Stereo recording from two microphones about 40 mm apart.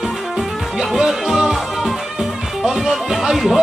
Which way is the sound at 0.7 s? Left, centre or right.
Centre.